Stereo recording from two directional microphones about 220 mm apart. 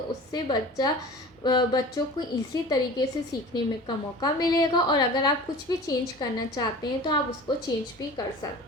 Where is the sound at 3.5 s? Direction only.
20° left (ahead or behind).